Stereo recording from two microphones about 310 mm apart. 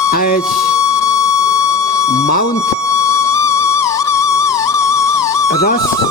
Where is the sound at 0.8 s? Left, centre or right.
Centre.